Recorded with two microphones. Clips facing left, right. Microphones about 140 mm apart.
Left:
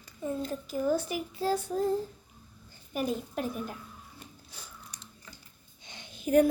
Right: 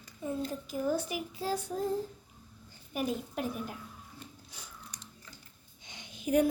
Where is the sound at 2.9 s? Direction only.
10° right (ahead or behind).